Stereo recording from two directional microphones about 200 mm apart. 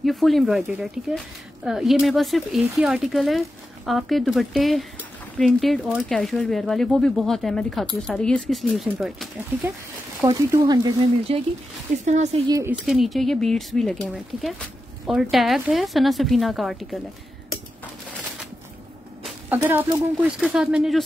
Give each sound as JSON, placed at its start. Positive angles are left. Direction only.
{"t": 0.0, "sound": "speech", "side_deg": 0}
{"t": 10.2, "sound": "speech", "side_deg": -15}
{"t": 12.0, "sound": "a woman's voice", "side_deg": -35}
{"t": 12.4, "sound": "speech", "side_deg": -15}
{"t": 12.8, "sound": "speech", "side_deg": 0}
{"t": 19.2, "sound": "a sound", "side_deg": -10}
{"t": 20.2, "sound": "speech", "side_deg": -5}